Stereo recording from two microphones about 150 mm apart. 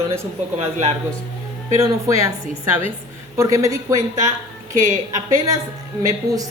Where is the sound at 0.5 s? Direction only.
45° right (ahead or behind).